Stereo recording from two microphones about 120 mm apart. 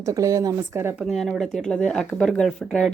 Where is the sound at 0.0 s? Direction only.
25° right (ahead or behind).